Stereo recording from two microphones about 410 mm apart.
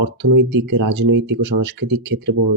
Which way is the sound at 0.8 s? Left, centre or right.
Right.